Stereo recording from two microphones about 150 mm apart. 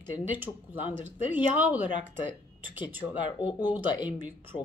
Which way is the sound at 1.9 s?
35° left (ahead or behind).